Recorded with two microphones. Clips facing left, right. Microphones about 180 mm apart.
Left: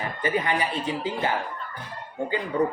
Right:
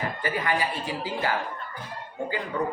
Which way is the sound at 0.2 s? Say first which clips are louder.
Left 4 dB; 20° left (ahead or behind).